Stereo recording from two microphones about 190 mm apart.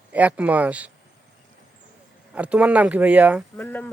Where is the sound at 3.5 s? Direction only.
10° left (ahead or behind).